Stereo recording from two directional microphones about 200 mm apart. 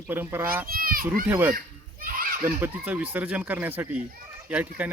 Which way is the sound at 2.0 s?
45° right (ahead or behind).